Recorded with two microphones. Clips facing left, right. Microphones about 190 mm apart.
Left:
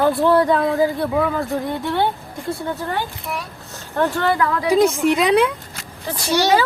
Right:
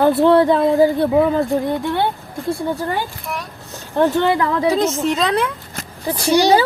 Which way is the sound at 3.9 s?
20° right (ahead or behind).